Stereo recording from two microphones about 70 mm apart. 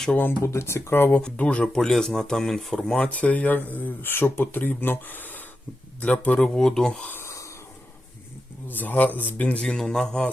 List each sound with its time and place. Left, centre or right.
0.4 s speech: left
1.1 s speech: centre
3.1 s speech: left
7.1 s a sound: left
8.6 s speech: left
9.6 s speech: centre